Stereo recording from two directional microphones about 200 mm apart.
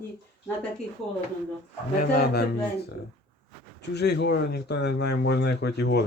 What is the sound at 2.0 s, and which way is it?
Speech, 50° left (ahead or behind).